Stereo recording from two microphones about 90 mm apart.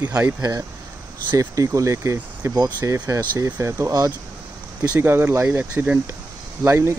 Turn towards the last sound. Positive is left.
turn(degrees=-30)  # may be behind; listen again after turning